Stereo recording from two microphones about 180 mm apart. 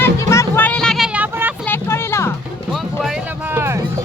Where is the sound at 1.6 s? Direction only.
10° left (ahead or behind).